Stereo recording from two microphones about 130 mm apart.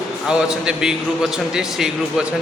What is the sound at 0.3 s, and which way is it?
A man's voice, 5° right (ahead or behind).